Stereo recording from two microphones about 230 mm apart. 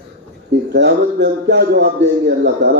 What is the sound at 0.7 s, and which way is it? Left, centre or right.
A man's voice, right.